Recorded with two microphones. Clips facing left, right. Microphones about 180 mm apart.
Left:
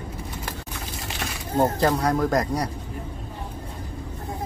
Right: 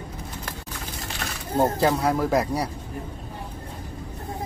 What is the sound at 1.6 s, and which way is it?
Speech, centre (ahead or behind).